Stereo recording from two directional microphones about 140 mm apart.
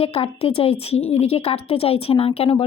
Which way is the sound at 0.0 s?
45° left (ahead or behind).